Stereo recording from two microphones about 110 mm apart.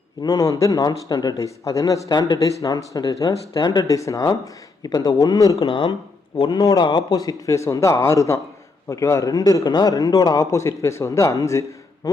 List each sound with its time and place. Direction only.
0.2 s speech: 35° left (ahead or behind)
5.5 s speech: 50° left (ahead or behind)
6.5 s a man's voice: 35° left (ahead or behind)